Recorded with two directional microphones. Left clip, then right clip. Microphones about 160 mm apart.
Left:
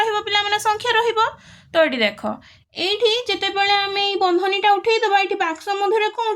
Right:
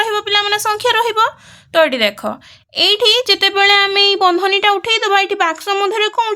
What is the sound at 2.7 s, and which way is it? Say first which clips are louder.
Speech: right 7 dB; 40° right (ahead or behind).